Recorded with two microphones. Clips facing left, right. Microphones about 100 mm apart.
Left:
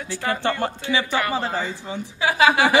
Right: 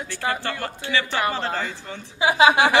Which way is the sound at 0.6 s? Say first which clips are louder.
Left 2 dB; 15° left (ahead or behind).